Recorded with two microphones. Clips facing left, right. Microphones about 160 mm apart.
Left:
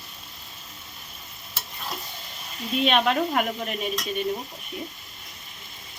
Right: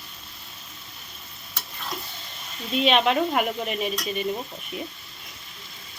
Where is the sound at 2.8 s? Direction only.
Centre (ahead or behind).